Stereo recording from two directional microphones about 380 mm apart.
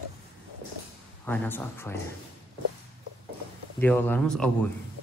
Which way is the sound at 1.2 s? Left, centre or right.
Centre.